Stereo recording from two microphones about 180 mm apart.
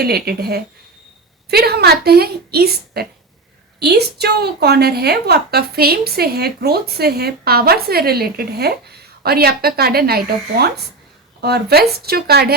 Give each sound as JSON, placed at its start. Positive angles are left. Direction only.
{"t": 0.0, "sound": "a woman's voice", "side_deg": -60}